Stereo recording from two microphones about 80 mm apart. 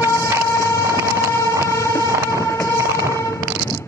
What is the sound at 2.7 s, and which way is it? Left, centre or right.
Train, right.